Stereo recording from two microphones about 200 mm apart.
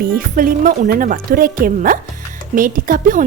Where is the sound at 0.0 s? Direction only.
45° right (ahead or behind).